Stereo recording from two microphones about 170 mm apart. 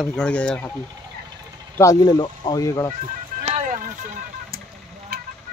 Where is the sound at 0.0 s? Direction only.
5° left (ahead or behind).